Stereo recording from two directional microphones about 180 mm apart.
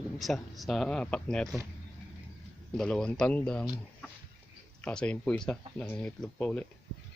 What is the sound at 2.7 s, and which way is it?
Speech, 5° left (ahead or behind).